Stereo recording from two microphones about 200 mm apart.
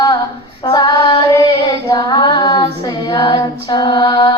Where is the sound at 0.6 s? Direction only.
20° left (ahead or behind).